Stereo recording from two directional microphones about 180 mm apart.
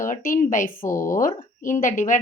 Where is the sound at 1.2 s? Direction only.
50° left (ahead or behind).